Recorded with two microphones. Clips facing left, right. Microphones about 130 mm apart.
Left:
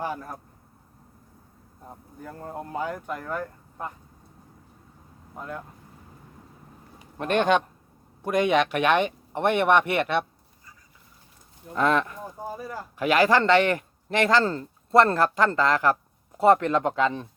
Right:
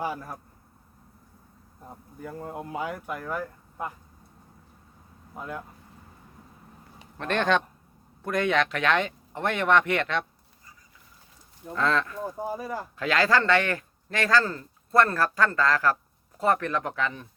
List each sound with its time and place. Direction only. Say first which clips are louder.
0.0 s speech: even; 5° right (ahead or behind)
2.2 s speech: right 1 dB; 5° right (ahead or behind)
5.3 s speech: even; 5° right (ahead or behind)
7.2 s speech: left 3 dB; 15° left (ahead or behind)
11.7 s speech: left 3 dB; 20° left (ahead or behind)
12.5 s speech: right 2 dB; 10° right (ahead or behind)
13.0 s speech: left 4 dB; 15° left (ahead or behind)